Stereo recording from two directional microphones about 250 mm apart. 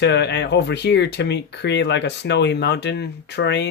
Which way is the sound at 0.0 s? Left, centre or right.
Left.